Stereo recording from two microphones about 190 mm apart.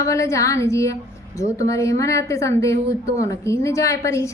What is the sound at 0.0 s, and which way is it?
Speech, 15° left (ahead or behind).